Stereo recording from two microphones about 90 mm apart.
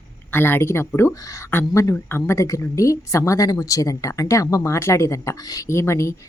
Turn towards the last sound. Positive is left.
turn(degrees=35)  # may be behind; listen again after turning